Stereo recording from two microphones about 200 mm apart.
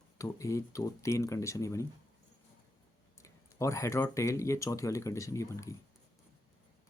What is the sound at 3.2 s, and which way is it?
Speech, 15° left (ahead or behind).